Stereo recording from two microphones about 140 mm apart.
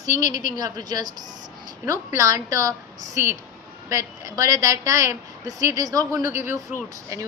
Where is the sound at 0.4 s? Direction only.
30° right (ahead or behind).